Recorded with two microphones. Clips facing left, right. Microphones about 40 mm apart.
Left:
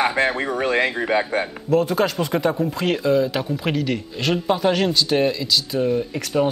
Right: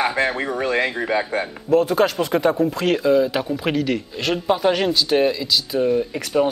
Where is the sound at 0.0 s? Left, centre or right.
Centre.